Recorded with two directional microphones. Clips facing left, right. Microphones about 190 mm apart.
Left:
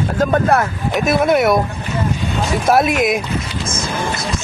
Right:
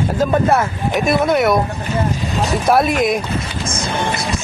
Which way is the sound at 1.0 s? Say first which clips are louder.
Left 1 dB; centre (ahead or behind).